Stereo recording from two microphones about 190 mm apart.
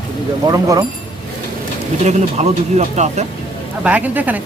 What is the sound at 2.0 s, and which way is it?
Speech, 35° right (ahead or behind).